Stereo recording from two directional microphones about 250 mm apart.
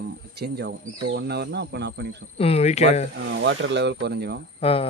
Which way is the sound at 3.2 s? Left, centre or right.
Right.